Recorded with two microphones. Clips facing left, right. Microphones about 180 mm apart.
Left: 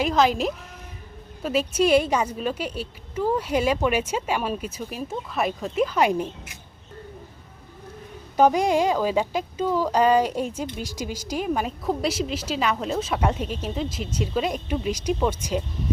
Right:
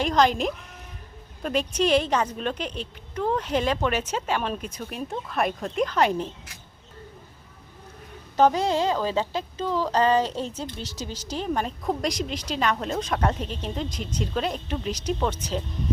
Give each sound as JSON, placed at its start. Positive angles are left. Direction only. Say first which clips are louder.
{"t": 0.0, "sound": "a woman's voice", "louder": "left 1 dB", "side_deg": 5}
{"t": 8.4, "sound": "a woman's voice", "louder": "left 2 dB", "side_deg": 15}